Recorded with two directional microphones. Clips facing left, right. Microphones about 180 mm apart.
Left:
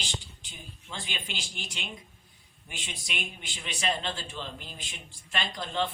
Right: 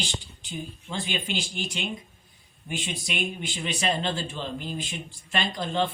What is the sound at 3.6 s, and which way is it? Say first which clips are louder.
Speech: right 4 dB; 35° right (ahead or behind).